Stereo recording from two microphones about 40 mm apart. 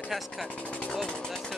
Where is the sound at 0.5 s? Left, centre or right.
Left.